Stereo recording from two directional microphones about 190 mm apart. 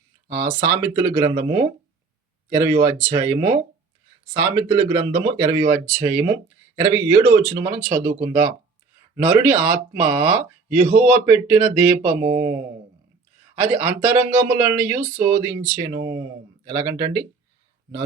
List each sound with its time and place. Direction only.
0.3 s speech: 15° right (ahead or behind)
13.6 s speech: 10° right (ahead or behind)